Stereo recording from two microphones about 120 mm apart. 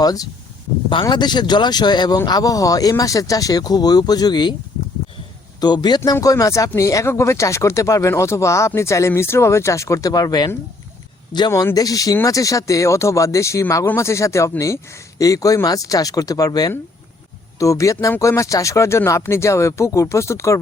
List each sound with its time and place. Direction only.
0.0 s speech: 30° left (ahead or behind)
5.5 s a man's voice: 35° left (ahead or behind)